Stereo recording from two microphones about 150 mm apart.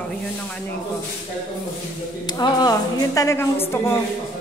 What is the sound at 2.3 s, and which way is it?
A woman's voice, 25° left (ahead or behind).